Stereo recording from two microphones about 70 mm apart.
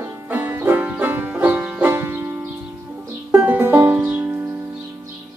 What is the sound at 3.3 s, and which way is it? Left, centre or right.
Music, right.